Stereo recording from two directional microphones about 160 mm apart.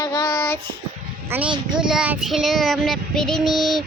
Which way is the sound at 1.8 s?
5° right (ahead or behind).